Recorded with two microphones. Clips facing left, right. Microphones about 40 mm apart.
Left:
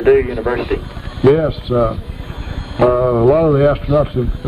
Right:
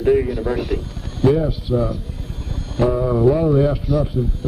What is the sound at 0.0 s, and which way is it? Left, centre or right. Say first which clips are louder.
A man's voice: left 5 dB; left.